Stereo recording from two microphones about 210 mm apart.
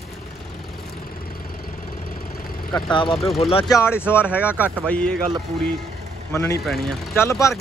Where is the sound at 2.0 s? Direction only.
45° left (ahead or behind).